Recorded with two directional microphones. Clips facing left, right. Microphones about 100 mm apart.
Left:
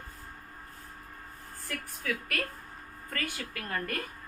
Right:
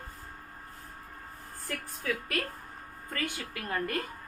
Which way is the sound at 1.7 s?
25° right (ahead or behind).